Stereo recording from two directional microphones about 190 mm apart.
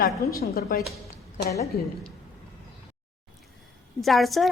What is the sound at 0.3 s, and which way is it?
Speech, 50° left (ahead or behind).